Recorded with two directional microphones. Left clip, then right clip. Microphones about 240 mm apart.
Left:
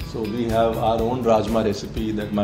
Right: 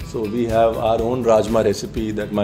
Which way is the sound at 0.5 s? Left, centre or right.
Right.